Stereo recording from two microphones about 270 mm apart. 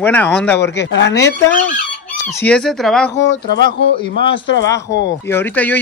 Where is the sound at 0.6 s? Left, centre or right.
Left.